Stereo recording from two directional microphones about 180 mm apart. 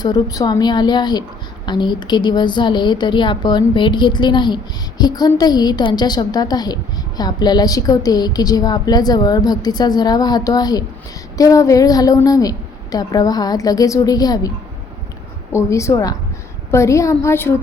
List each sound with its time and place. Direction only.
0.0 s a woman's voice: 20° left (ahead or behind)
15.5 s a woman's voice: 15° left (ahead or behind)